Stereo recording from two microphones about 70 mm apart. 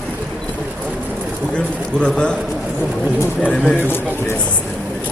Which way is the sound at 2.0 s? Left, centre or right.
Centre.